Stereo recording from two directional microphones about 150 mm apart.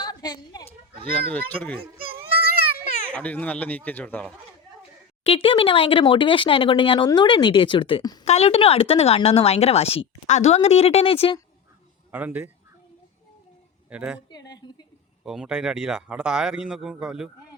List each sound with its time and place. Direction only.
0.0 s a sound: 25° left (ahead or behind)
1.1 s speech: 10° left (ahead or behind)
2.1 s a sound: 90° right
3.1 s speech: 10° left (ahead or behind)
5.2 s speech: 40° left (ahead or behind)
8.2 s speech: 45° left (ahead or behind)
12.1 s speech: 10° right (ahead or behind)
13.9 s speech: 10° right (ahead or behind)
14.3 s a sound: 25° left (ahead or behind)
15.2 s speech: 5° right (ahead or behind)